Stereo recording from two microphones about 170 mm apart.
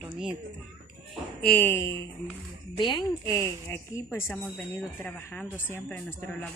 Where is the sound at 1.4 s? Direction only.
10° left (ahead or behind).